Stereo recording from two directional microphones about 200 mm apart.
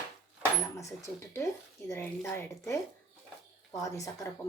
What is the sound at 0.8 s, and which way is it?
Speech, 15° left (ahead or behind).